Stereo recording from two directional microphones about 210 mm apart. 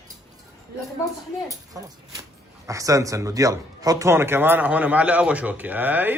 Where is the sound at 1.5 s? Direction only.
15° right (ahead or behind).